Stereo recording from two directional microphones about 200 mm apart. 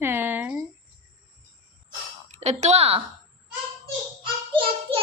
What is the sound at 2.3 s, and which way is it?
Speech, 35° right (ahead or behind).